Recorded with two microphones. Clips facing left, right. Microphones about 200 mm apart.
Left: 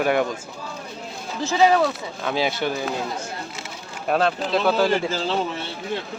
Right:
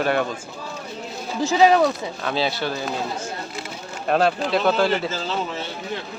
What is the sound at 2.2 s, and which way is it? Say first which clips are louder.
Speech: left 1 dB; 15° left (ahead or behind).